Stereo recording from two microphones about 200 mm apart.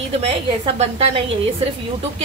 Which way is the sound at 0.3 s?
30° right (ahead or behind).